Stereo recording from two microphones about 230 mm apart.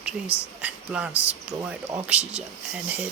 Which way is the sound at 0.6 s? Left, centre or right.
Centre.